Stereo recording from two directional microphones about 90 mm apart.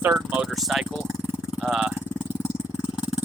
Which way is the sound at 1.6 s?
5° right (ahead or behind).